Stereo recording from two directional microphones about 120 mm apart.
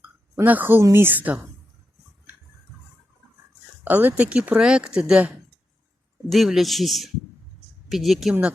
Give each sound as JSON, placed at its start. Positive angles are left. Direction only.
{"t": 0.4, "sound": "speech", "side_deg": -15}
{"t": 3.8, "sound": "speech", "side_deg": -15}
{"t": 6.3, "sound": "a man's voice", "side_deg": 0}